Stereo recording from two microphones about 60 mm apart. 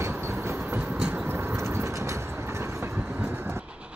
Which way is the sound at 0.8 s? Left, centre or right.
Right.